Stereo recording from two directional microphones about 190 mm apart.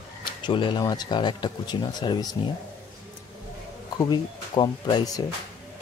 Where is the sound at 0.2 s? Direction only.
25° left (ahead or behind).